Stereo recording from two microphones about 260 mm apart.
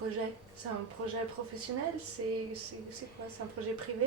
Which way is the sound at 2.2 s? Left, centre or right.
Right.